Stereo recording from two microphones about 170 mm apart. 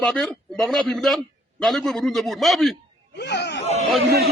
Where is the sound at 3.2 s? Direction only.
90° left.